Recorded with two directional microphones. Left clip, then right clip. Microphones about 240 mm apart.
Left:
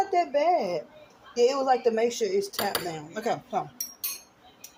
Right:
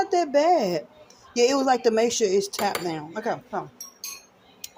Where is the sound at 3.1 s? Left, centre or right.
Centre.